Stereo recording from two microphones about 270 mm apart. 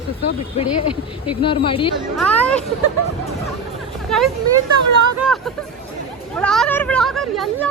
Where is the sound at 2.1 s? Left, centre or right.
Centre.